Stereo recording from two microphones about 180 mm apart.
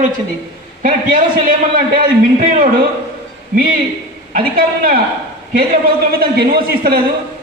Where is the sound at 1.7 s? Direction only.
50° right (ahead or behind).